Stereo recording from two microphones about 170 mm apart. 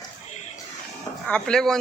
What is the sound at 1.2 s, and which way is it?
Speech, 5° left (ahead or behind).